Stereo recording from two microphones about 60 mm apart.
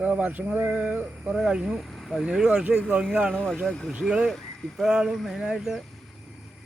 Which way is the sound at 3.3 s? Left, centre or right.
Centre.